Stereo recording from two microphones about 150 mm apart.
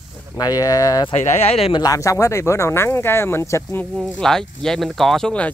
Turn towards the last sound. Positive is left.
turn(degrees=5)  # may be behind; listen again after turning